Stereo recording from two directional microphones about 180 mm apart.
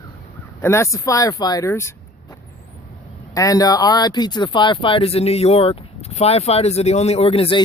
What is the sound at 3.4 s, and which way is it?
Speech, 20° left (ahead or behind).